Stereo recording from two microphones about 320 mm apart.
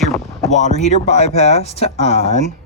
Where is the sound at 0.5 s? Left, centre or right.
Left.